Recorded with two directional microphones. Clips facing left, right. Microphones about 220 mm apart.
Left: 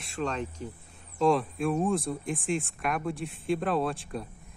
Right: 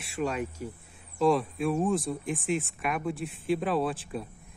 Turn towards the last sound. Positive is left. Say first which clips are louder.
# even
turn(degrees=0)  # may be behind; listen again after turning